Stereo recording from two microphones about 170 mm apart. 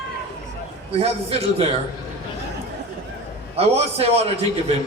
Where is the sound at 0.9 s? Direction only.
35° right (ahead or behind).